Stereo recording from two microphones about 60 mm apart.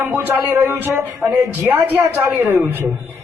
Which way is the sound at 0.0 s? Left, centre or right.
Right.